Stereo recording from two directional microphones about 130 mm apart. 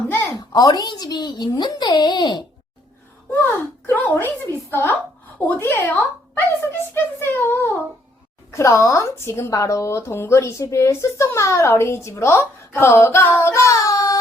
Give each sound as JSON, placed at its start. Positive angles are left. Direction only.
{"t": 0.3, "sound": "a child's voice", "side_deg": 30}
{"t": 3.3, "sound": "a child's voice", "side_deg": 20}